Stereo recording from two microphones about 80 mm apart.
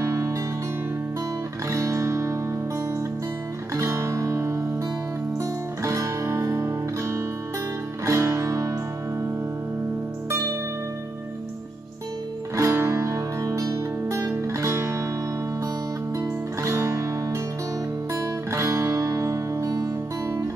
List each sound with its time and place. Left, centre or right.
0.0 s music: right
1.7 s music: right
3.7 s music: right
12.5 s music: right
16.2 s music: right
18.5 s music: right